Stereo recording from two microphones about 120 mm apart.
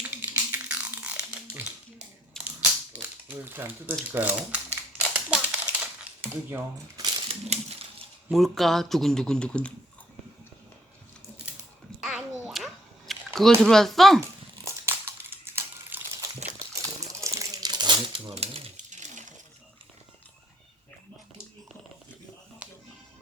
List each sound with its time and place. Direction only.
0.2 s a sound: 15° right (ahead or behind)
3.3 s speech: 20° right (ahead or behind)
4.9 s typewriter: 10° right (ahead or behind)
7.3 s crushing: 65° right (ahead or behind)
8.3 s speech: centre (ahead or behind)
12.0 s babbling: centre (ahead or behind)
13.6 s speech: 5° left (ahead or behind)
14.2 s crumpling: 20° right (ahead or behind)
15.4 s a sound: 20° right (ahead or behind)
16.7 s coin: 25° right (ahead or behind)
18.3 s typewriter: 55° right (ahead or behind)
18.8 s a sound: 90° right
22.6 s music: 10° right (ahead or behind)